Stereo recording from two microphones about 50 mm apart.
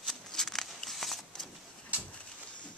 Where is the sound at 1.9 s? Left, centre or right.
Right.